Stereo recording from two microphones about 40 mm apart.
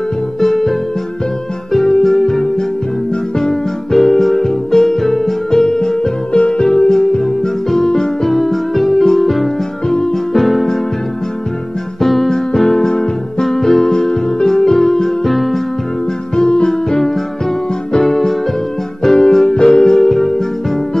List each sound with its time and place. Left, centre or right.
0.4 s music: centre
6.3 s music: left; by 9.5 s centre
10.3 s keyboard: centre
12.0 s music: centre
16.3 s music: centre